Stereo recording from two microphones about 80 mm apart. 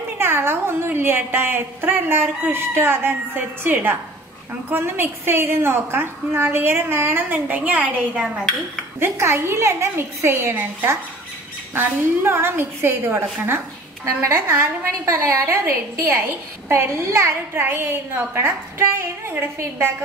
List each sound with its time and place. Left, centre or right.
0.2 s a woman's voice: right; by 8.5 s centre
9.0 s a woman's voice: right